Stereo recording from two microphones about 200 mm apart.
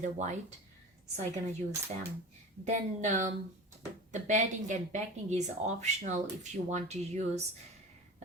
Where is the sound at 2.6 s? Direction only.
40° right (ahead or behind).